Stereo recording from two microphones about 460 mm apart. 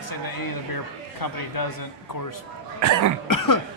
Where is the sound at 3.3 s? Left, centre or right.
Left.